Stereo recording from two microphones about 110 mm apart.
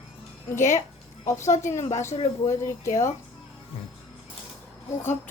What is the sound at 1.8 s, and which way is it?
Speech, 90° left.